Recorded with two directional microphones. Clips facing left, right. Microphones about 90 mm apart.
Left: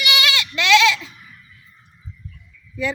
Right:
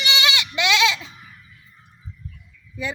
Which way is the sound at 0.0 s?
25° right (ahead or behind).